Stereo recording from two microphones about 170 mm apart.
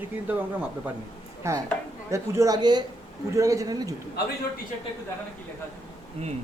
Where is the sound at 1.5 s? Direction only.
15° right (ahead or behind).